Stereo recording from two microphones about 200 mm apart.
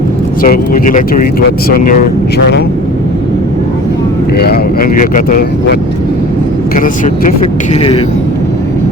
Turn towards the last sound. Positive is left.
turn(degrees=30)  # may be behind; listen again after turning